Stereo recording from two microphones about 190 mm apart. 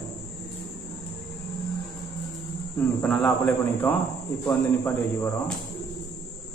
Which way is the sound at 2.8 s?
5° left (ahead or behind).